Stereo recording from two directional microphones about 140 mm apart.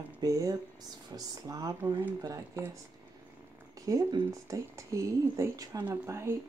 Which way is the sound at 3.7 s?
25° right (ahead or behind).